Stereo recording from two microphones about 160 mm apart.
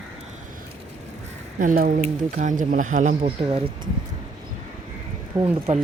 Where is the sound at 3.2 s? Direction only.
35° right (ahead or behind).